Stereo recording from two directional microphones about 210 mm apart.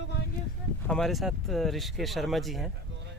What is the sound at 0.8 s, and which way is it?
Speech, centre (ahead or behind).